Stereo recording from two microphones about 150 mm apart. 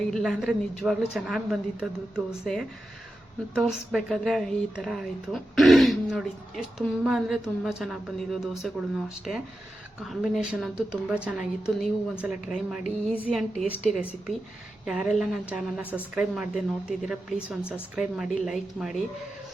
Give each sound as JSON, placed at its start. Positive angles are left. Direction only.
{"t": 0.1, "sound": "speech", "side_deg": 0}